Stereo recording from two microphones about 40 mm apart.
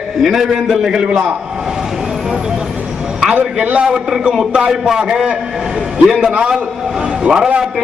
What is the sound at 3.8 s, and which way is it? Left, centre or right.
A man's voice, centre.